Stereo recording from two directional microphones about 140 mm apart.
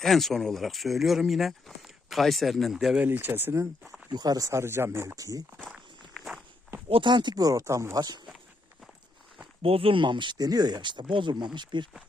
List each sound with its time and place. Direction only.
0.0 s speech: centre (ahead or behind)
3.1 s speech: 15° right (ahead or behind)
4.1 s speech: 30° right (ahead or behind)
6.1 s walk: centre (ahead or behind)
6.9 s speech: 35° right (ahead or behind)
9.6 s speech: 40° right (ahead or behind)